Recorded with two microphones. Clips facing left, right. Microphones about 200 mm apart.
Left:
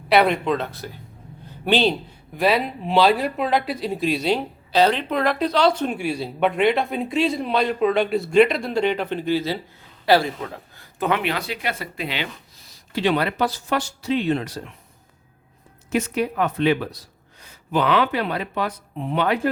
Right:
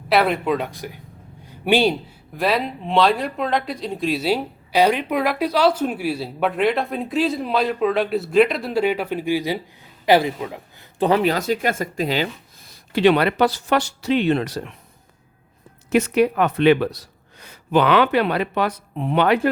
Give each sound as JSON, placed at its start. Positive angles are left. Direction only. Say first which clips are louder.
{"t": 0.1, "sound": "a man's voice", "louder": "even", "side_deg": 0}
{"t": 2.3, "sound": "speech", "louder": "left 1 dB", "side_deg": 0}
{"t": 11.0, "sound": "speech", "louder": "right 5 dB", "side_deg": -35}
{"t": 12.7, "sound": "speech", "louder": "right 5 dB", "side_deg": -65}
{"t": 15.9, "sound": "speech", "louder": "right 6 dB", "side_deg": -70}